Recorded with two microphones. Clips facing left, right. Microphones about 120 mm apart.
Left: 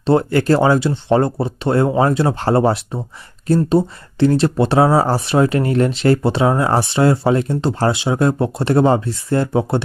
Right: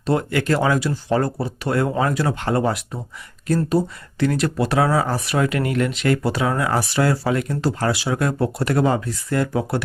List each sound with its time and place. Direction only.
0.0 s speech: 30° left (ahead or behind)